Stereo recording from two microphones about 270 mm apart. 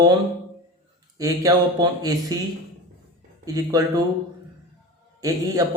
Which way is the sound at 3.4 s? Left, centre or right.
Centre.